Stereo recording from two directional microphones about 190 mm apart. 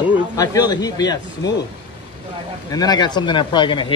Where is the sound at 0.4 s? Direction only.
20° left (ahead or behind).